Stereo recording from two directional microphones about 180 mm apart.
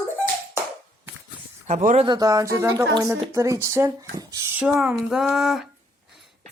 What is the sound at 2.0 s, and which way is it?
Speech, 20° right (ahead or behind).